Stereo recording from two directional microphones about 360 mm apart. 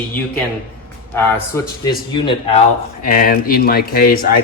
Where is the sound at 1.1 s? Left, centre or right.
Centre; by 4.4 s left.